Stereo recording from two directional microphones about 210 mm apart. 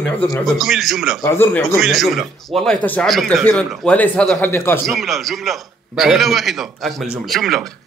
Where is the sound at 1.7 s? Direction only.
Centre (ahead or behind).